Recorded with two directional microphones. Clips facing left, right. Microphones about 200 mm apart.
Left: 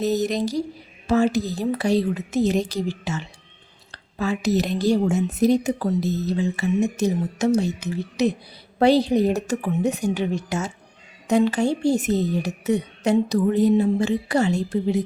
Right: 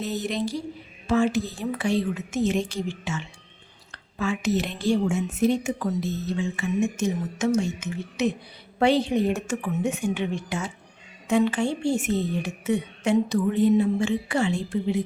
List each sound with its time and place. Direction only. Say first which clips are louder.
0.0 s a woman's voice: left 6 dB; 40° left (ahead or behind)